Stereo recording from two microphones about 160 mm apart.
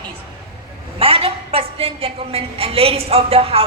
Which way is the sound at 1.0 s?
35° right (ahead or behind).